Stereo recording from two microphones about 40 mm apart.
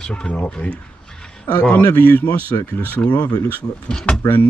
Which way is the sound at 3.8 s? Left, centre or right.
Centre.